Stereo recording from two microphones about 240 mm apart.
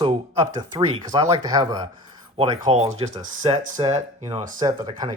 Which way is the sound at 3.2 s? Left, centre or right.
Right.